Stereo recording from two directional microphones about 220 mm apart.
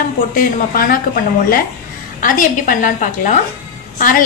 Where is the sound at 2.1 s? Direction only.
40° left (ahead or behind).